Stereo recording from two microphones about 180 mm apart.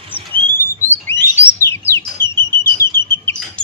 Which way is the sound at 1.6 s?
15° left (ahead or behind).